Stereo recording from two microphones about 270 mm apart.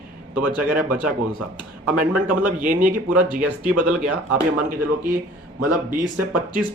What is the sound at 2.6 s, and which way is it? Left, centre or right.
Speech, right.